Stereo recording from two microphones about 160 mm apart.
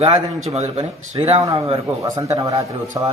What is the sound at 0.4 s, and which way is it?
Speech, 40° right (ahead or behind).